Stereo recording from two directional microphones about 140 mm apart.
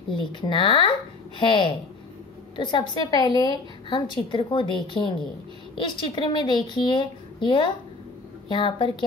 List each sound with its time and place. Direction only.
0.1 s a woman's voice: 35° left (ahead or behind)